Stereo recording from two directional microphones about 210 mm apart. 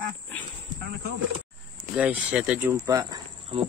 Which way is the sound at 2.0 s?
5° right (ahead or behind).